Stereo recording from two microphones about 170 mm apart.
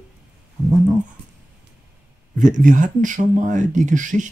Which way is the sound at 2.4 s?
50° right (ahead or behind).